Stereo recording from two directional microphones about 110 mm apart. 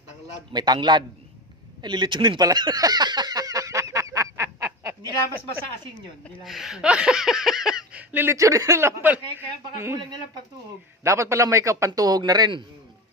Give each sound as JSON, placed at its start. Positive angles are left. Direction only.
{"t": 0.5, "sound": "speech", "side_deg": -40}
{"t": 1.8, "sound": "a sound", "side_deg": -45}
{"t": 6.4, "sound": "speech", "side_deg": 0}
{"t": 8.1, "sound": "speech", "side_deg": -20}
{"t": 8.4, "sound": "speech", "side_deg": -30}
{"t": 11.0, "sound": "speech", "side_deg": -25}